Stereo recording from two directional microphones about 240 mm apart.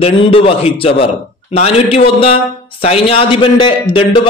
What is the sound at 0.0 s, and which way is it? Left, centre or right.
A man's voice, left.